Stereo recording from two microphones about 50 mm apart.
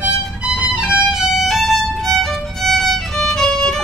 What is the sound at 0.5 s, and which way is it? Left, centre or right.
Violin, right.